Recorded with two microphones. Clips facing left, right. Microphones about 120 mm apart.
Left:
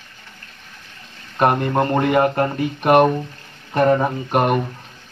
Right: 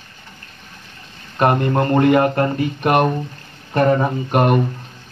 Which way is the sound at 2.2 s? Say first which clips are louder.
Right 1 dB; 10° left (ahead or behind).